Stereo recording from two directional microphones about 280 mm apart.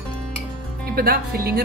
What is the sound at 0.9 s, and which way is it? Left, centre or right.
Speech, right.